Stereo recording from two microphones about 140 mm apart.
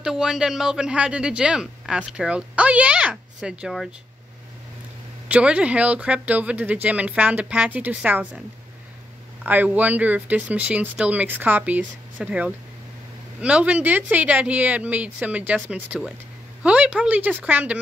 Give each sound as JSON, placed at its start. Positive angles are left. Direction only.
{"t": 0.0, "sound": "speech", "side_deg": -5}
{"t": 5.3, "sound": "speech", "side_deg": -10}
{"t": 9.4, "sound": "speech", "side_deg": -10}